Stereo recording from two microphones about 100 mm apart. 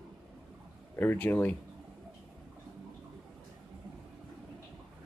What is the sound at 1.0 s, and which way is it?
Speech, 20° left (ahead or behind).